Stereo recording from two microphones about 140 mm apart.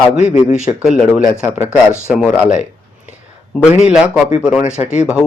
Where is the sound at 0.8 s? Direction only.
Centre (ahead or behind).